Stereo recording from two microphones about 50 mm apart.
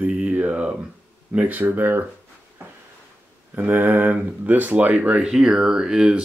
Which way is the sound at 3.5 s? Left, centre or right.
Right.